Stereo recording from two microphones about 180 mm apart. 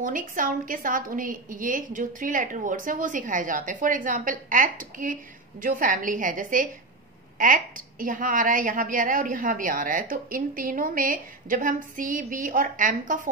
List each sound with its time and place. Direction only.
0.0 s a woman's voice: 50° right (ahead or behind)